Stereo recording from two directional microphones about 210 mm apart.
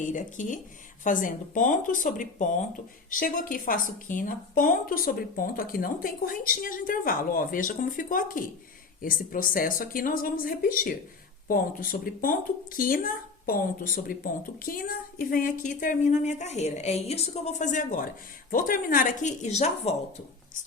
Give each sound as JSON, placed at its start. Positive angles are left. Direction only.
{"t": 0.0, "sound": "speech", "side_deg": 40}